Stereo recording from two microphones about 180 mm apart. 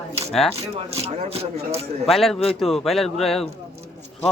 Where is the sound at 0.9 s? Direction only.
35° right (ahead or behind).